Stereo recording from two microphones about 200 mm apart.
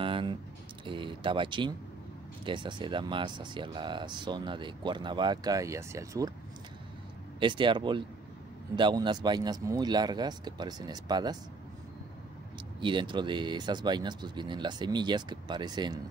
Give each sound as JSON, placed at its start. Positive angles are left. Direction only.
{"t": 0.0, "sound": "a sound", "side_deg": -25}
{"t": 0.8, "sound": "speech", "side_deg": -25}
{"t": 7.3, "sound": "speech", "side_deg": -25}
{"t": 12.8, "sound": "speech", "side_deg": -25}